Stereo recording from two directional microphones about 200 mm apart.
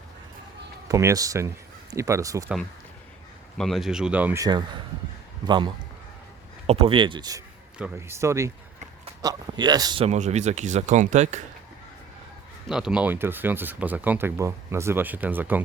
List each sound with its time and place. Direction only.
0.9 s speech: 15° right (ahead or behind)
3.6 s speech: centre (ahead or behind)
4.4 s speech: 20° right (ahead or behind)
7.8 s speech: 10° right (ahead or behind); by 11.4 s 35° right (ahead or behind)
12.6 s speech: 5° right (ahead or behind)